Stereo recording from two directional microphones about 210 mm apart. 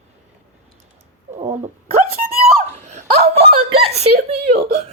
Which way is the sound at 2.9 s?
30° right (ahead or behind).